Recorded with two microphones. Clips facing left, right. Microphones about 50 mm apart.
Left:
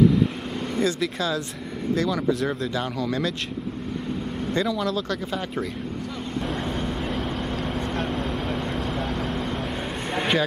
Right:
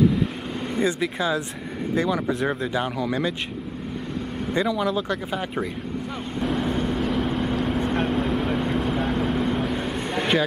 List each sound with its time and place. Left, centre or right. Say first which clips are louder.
0.7 s speech: right 1 dB; centre
4.6 s speech: right 2 dB; centre
6.4 s vehicle: right 6 dB; centre